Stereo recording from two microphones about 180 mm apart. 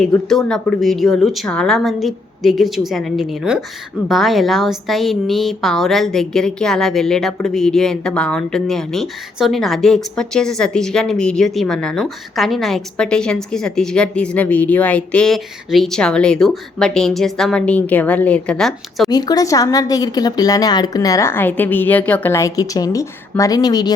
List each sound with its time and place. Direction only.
0.0 s a woman's voice: centre (ahead or behind)
19.1 s a woman's voice: 20° left (ahead or behind)